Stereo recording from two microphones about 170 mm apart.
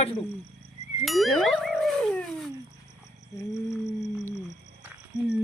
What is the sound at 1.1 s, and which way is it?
Wild animals, centre (ahead or behind).